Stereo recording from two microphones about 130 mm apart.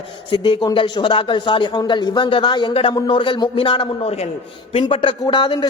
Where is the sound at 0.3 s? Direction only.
40° left (ahead or behind).